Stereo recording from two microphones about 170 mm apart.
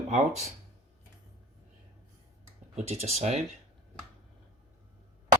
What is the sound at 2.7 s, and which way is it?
Speech, 40° right (ahead or behind).